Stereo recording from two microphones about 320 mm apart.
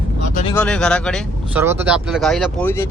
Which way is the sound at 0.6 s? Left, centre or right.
Centre.